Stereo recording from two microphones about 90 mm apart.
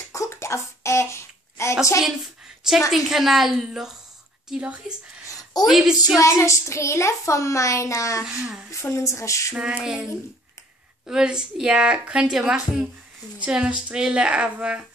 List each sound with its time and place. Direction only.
0.1 s a sound: 35° left (ahead or behind)
2.9 s a woman's voice: 5° right (ahead or behind)
4.5 s a woman's voice: 15° right (ahead or behind)
5.3 s a sound: 45° left (ahead or behind)
5.7 s a woman's voice: 5° right (ahead or behind)
6.1 s a child's voice: 35° left (ahead or behind)
8.2 s a woman's voice: 10° right (ahead or behind)
8.8 s a child's voice: 35° left (ahead or behind)
9.5 s a woman's voice: 10° right (ahead or behind)